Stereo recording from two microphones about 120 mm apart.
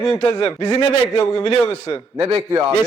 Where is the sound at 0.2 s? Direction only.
35° left (ahead or behind).